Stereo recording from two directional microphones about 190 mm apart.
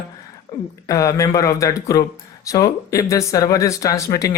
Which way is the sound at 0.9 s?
15° left (ahead or behind).